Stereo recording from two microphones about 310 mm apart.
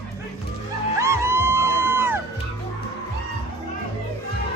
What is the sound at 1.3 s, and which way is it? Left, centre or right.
Music, left.